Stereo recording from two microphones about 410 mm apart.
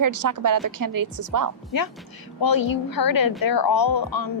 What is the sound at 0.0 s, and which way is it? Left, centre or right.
A woman's voice, right.